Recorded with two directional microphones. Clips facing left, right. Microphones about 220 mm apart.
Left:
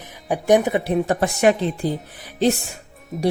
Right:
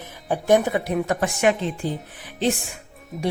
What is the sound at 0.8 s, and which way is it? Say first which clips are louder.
Speech: left 3 dB; 30° left (ahead or behind).